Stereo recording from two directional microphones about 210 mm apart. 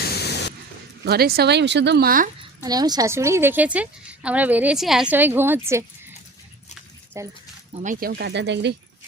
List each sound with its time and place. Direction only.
0.0 s a sound: 50° left (ahead or behind)
1.0 s speech: 50° right (ahead or behind)
2.6 s a woman's voice: 20° right (ahead or behind)
7.1 s a woman's voice: 15° right (ahead or behind)
7.8 s speech: 40° right (ahead or behind); by 8.7 s 55° right (ahead or behind)